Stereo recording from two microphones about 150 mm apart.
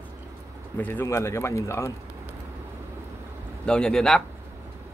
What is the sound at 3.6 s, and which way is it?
Speech, 5° left (ahead or behind).